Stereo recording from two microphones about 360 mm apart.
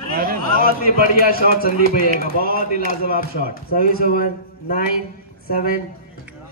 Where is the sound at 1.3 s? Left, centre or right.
Left.